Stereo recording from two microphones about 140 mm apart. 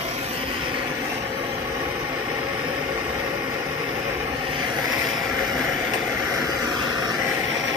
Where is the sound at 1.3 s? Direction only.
15° right (ahead or behind).